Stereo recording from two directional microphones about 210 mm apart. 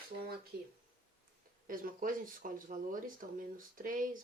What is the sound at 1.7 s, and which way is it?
Speech, 40° right (ahead or behind).